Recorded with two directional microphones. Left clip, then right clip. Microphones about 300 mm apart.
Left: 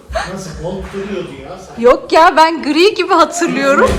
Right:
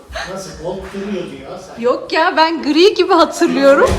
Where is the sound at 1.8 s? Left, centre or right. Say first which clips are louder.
Left 7 dB; centre.